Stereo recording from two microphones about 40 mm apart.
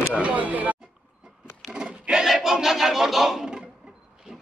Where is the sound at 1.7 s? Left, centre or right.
Centre.